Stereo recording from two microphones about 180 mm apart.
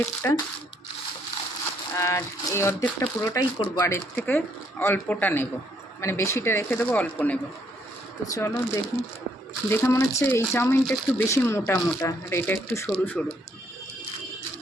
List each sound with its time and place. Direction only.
0.0 s speech: 10° left (ahead or behind)
2.0 s speech: 15° left (ahead or behind)
8.4 s speech: 15° left (ahead or behind)